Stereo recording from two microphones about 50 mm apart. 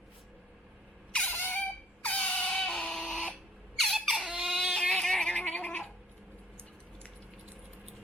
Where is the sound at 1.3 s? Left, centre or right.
Left.